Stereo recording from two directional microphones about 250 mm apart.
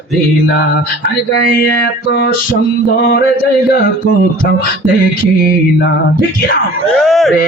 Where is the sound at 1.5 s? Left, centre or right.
Left.